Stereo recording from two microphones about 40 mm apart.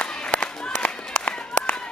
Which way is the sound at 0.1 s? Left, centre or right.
Centre.